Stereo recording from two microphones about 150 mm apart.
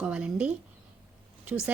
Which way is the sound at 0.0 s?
5° right (ahead or behind).